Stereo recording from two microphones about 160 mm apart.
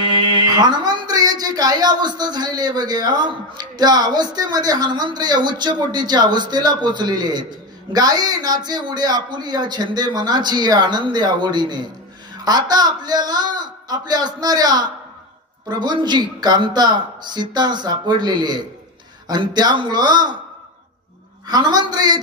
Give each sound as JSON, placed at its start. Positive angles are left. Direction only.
{"t": 0.2, "sound": "speech", "side_deg": -25}
{"t": 21.5, "sound": "speech", "side_deg": -25}